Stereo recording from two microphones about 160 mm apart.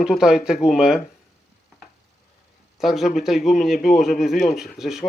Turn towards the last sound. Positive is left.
turn(degrees=0)  # may be behind; listen again after turning